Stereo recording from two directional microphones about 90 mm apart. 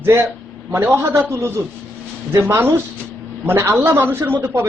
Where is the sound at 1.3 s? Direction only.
30° right (ahead or behind).